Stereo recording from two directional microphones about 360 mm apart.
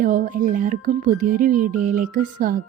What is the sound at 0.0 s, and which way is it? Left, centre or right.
Speech, right.